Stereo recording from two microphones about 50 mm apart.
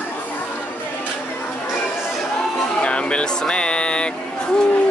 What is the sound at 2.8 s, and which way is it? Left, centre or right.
Speech, left.